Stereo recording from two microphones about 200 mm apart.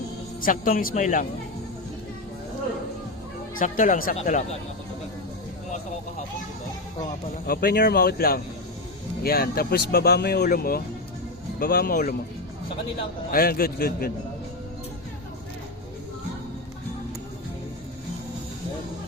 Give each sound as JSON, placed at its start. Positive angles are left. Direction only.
{"t": 0.4, "sound": "speech", "side_deg": 45}
{"t": 3.5, "sound": "speech", "side_deg": 40}
{"t": 7.4, "sound": "speech", "side_deg": 50}
{"t": 13.3, "sound": "speech", "side_deg": 50}